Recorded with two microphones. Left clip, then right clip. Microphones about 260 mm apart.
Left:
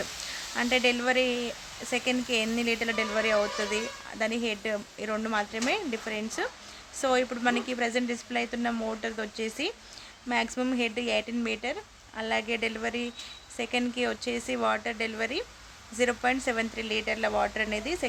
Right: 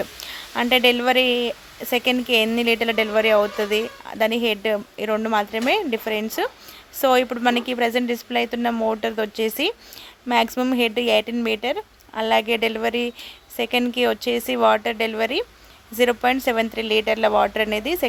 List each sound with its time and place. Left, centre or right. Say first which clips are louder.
0.5 s speech: right 8 dB; right